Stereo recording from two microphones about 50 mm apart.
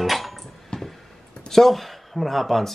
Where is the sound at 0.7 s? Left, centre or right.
Centre.